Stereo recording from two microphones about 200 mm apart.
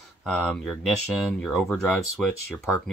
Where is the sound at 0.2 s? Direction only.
5° left (ahead or behind).